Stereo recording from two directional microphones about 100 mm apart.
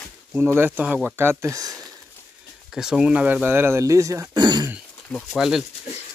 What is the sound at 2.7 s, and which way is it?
Speech, 5° right (ahead or behind).